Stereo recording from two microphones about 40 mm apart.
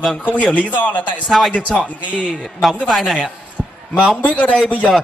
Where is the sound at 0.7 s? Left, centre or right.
Left.